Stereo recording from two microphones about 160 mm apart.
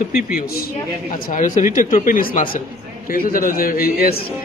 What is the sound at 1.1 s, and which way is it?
Speech, 55° left (ahead or behind).